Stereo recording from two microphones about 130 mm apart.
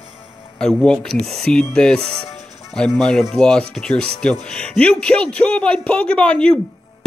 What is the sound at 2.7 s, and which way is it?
Speech, 5° left (ahead or behind).